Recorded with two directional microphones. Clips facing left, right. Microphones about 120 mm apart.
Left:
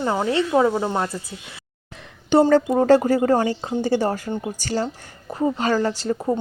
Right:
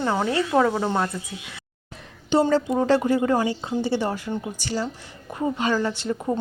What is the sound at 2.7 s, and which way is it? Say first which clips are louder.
Speech: left 4 dB; 40° left (ahead or behind).